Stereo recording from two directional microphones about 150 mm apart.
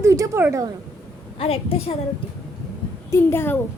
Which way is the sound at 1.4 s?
40° left (ahead or behind).